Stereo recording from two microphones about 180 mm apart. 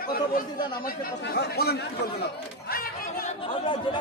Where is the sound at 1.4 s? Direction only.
65° left (ahead or behind).